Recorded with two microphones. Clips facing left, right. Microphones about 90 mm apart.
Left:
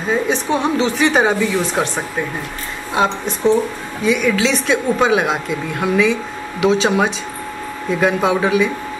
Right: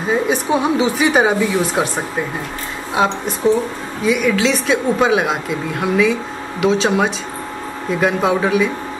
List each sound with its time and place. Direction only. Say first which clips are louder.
0.1 s speech: right 1 dB; 5° right (ahead or behind)
2.9 s speech: even; 5° right (ahead or behind)